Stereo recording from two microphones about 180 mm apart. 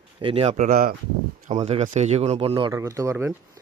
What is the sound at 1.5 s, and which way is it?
Speech, 35° right (ahead or behind).